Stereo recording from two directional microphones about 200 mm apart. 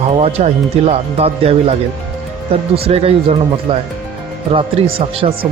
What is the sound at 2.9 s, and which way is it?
Speech, 30° right (ahead or behind).